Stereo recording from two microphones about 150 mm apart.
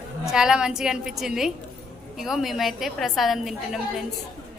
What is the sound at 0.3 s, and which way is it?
A woman's voice, 5° right (ahead or behind).